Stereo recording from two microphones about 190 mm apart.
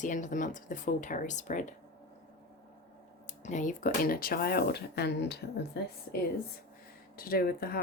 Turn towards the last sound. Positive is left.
turn(degrees=50)  # may be behind; listen again after turning